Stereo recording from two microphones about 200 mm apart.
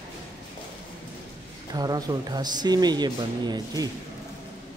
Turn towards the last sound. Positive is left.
turn(degrees=-20)  # may be behind; listen again after turning